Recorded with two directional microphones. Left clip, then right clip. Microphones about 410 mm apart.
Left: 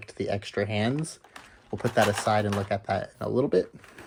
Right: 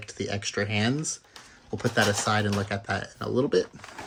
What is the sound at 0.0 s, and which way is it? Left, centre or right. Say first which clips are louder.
Speech: left 1 dB; centre.